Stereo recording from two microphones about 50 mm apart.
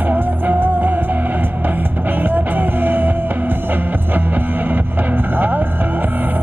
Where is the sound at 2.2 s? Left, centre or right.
Right.